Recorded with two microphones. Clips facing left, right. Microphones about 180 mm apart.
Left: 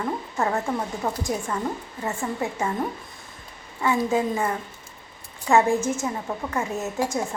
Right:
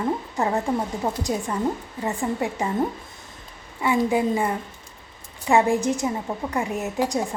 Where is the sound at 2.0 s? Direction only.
15° right (ahead or behind).